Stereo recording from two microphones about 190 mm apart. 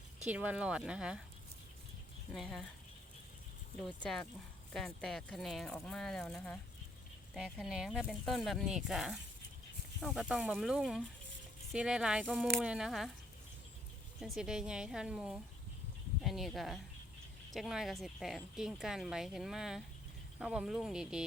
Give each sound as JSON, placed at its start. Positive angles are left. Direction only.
{"t": 0.3, "sound": "speech", "side_deg": -5}
{"t": 2.3, "sound": "speech", "side_deg": 0}
{"t": 4.7, "sound": "speech", "side_deg": 0}
{"t": 14.2, "sound": "speech", "side_deg": 0}